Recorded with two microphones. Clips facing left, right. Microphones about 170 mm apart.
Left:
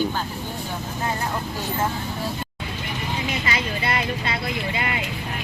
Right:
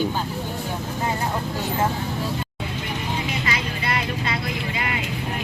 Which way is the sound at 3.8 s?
30° left (ahead or behind).